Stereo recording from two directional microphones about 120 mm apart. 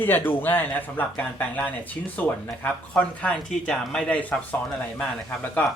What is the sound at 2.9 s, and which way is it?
Speech, 10° left (ahead or behind).